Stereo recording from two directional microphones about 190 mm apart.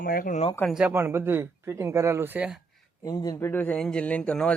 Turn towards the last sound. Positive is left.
turn(degrees=5)  # may be behind; listen again after turning